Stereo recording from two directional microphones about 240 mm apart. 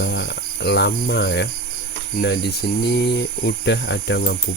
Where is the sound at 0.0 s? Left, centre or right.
Left.